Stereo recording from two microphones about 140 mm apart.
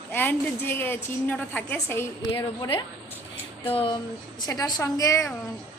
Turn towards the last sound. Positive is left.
turn(degrees=20)  # may be behind; listen again after turning